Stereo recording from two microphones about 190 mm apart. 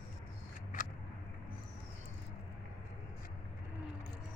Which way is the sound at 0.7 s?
45° left (ahead or behind).